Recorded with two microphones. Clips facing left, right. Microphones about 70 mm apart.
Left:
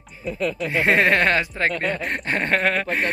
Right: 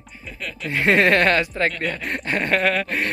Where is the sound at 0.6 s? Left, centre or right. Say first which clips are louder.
Right 2 dB; left.